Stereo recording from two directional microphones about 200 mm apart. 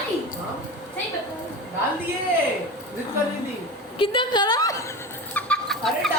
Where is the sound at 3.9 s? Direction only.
25° left (ahead or behind).